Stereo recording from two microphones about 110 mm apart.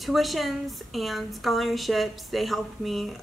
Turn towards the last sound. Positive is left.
turn(degrees=0)  # may be behind; listen again after turning